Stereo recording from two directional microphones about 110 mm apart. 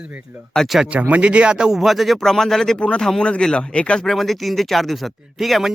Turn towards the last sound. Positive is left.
turn(degrees=0)  # may be behind; listen again after turning